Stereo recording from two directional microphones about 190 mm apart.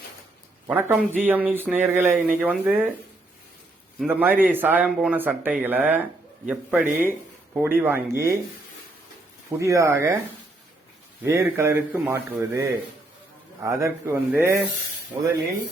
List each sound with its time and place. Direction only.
0.7 s speech: 5° right (ahead or behind)
3.9 s speech: 10° right (ahead or behind)
9.6 s speech: 15° right (ahead or behind)
11.2 s speech: 15° right (ahead or behind)